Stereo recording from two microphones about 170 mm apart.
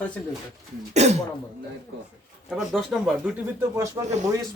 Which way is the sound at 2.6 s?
Centre (ahead or behind).